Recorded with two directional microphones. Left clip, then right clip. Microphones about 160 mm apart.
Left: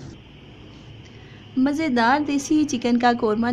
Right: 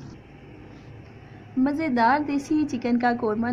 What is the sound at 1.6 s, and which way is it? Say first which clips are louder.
Speech: left 2 dB; 25° left (ahead or behind).